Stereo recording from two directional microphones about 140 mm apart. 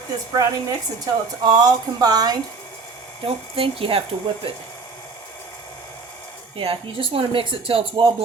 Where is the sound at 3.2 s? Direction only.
40° right (ahead or behind).